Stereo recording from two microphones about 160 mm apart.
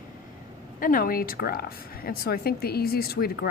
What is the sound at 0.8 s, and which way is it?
A woman's voice, 60° left (ahead or behind).